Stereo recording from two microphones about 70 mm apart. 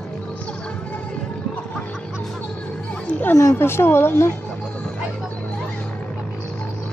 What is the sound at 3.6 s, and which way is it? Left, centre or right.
Speech, left.